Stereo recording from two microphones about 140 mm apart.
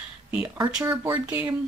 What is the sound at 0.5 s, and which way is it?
Speech, 30° right (ahead or behind).